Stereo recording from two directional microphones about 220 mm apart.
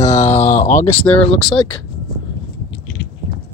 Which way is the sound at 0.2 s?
30° left (ahead or behind).